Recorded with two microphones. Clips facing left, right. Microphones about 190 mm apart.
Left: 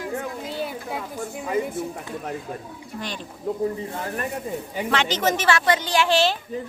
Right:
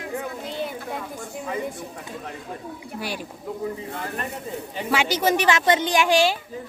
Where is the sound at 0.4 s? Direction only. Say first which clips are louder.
Even; 5° left (ahead or behind).